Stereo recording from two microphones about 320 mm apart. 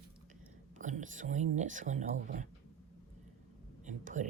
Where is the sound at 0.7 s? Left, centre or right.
Right.